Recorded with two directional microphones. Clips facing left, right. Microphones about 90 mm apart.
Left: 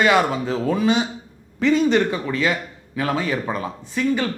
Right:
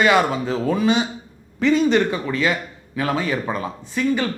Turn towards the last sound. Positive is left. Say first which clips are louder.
# even
turn(degrees=-15)  # may be behind; listen again after turning